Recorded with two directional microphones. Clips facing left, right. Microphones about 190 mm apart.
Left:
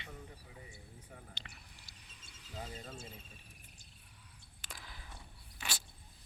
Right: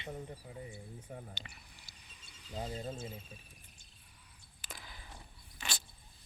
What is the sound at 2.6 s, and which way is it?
Speech, 35° right (ahead or behind).